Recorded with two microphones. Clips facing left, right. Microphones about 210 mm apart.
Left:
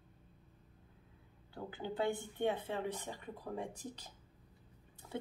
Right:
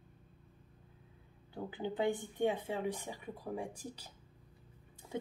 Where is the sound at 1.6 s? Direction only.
15° right (ahead or behind).